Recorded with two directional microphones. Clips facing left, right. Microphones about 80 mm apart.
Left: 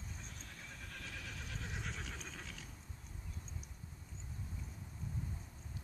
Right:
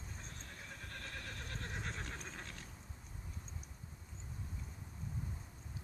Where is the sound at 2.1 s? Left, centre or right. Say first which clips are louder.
Right 1 dB; right.